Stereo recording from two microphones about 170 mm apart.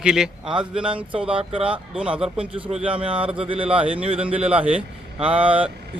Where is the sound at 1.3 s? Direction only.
35° right (ahead or behind).